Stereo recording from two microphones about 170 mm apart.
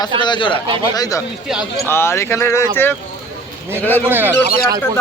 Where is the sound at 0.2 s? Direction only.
30° left (ahead or behind).